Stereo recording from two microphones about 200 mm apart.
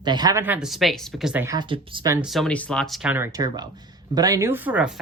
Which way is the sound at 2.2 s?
Centre (ahead or behind).